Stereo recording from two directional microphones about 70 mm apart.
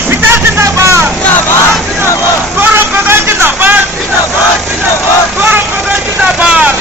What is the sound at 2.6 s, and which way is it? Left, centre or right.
Vehicle, right.